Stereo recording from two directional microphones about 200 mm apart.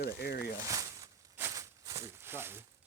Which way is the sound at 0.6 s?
15° right (ahead or behind).